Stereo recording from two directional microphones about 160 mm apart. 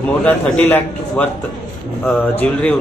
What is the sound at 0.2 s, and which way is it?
Speech, 10° left (ahead or behind).